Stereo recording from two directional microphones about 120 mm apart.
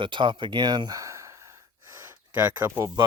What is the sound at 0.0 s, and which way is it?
Speech, 45° right (ahead or behind).